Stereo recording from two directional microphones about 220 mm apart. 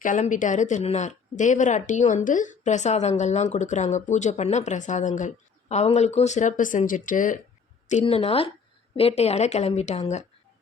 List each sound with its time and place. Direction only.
0.0 s a woman's voice: 35° left (ahead or behind)